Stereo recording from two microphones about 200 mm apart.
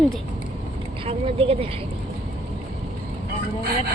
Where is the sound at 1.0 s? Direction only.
30° right (ahead or behind).